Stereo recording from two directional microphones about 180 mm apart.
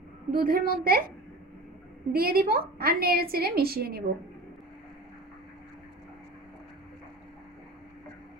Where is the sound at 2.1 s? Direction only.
55° right (ahead or behind).